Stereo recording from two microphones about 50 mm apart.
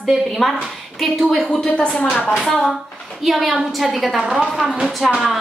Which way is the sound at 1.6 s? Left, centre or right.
Centre.